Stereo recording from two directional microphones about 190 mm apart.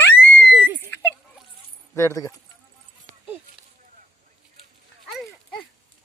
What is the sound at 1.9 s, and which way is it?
Speech, 15° left (ahead or behind).